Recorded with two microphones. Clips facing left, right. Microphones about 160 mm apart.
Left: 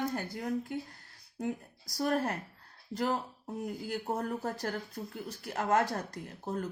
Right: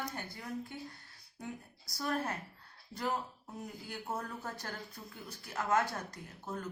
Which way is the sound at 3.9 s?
35° left (ahead or behind).